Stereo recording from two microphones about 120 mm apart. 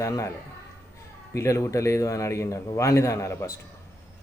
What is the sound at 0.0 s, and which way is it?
Speech, 25° left (ahead or behind).